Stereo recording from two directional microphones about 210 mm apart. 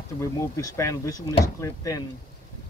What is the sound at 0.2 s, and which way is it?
Speech, 15° left (ahead or behind).